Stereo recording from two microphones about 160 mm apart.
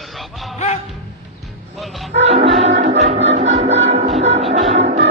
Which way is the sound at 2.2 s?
40° right (ahead or behind).